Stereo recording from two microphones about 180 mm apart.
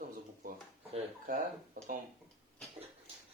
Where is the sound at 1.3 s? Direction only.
50° right (ahead or behind).